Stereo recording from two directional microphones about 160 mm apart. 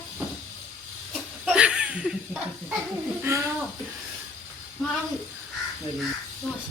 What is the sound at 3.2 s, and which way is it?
Speech, 20° right (ahead or behind).